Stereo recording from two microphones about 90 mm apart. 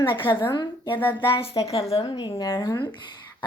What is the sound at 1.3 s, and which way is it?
Speech, 85° left.